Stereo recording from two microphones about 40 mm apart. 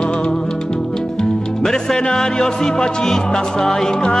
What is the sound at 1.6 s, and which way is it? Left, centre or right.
Music, centre.